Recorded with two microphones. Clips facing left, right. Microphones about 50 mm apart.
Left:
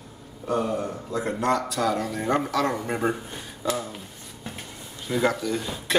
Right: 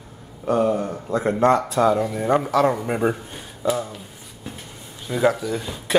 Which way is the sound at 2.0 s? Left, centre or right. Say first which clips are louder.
Right 4 dB; centre.